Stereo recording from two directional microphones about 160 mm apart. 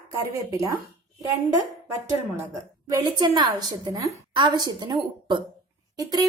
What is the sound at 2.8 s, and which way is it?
A woman's voice, 25° right (ahead or behind).